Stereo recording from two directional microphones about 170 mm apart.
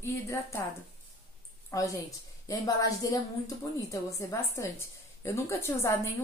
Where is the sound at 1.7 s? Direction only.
20° left (ahead or behind).